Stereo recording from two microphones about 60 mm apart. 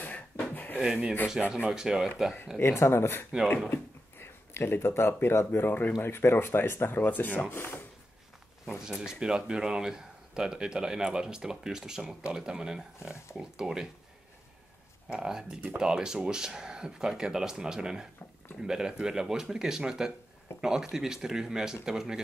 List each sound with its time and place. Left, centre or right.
0.0 s a sound: left
1.5 s speech: centre
2.6 s speech: left
8.6 s speech: centre
15.0 s speech: centre